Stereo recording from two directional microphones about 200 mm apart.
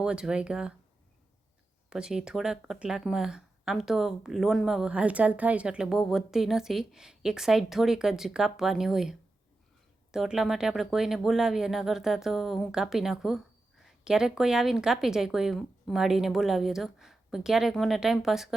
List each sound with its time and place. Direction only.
0.0 s speech: 5° right (ahead or behind)
1.9 s speech: 5° right (ahead or behind)